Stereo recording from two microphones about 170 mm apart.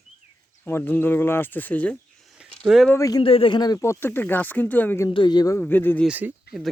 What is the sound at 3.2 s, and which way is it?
Speech, 30° left (ahead or behind).